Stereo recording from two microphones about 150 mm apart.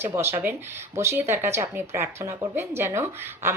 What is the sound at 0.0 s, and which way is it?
Speech, 15° right (ahead or behind).